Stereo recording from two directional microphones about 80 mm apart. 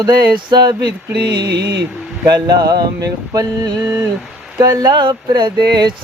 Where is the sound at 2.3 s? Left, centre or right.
Right.